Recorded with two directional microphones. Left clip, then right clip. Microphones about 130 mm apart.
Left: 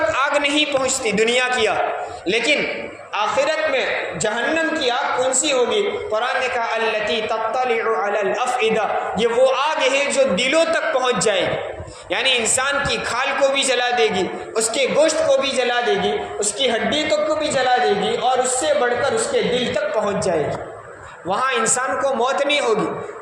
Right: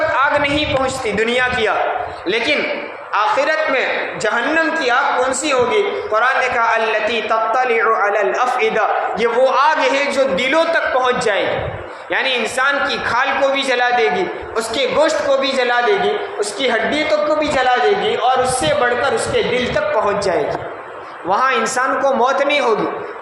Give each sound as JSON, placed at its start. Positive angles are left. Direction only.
{"t": 0.2, "sound": "a man's voice", "side_deg": 30}